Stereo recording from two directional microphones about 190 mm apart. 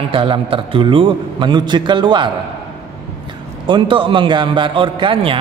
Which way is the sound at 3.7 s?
25° right (ahead or behind).